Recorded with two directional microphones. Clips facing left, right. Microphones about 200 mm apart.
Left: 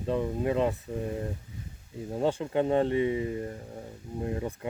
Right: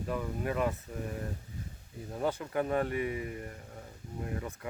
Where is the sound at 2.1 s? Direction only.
25° left (ahead or behind).